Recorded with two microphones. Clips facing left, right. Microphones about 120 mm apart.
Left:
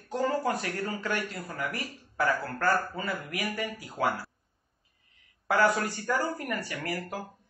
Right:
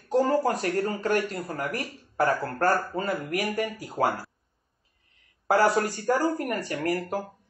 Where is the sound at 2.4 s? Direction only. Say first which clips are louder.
Right 3 dB; 50° right (ahead or behind).